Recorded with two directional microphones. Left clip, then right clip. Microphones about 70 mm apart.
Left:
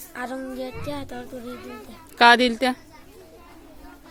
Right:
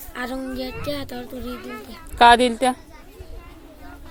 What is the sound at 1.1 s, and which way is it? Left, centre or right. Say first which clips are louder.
Speech: right 3 dB; left.